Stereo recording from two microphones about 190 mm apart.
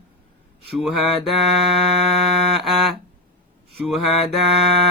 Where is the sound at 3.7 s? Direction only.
Centre (ahead or behind).